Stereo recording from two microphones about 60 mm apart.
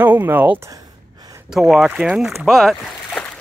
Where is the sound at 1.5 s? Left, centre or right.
Centre.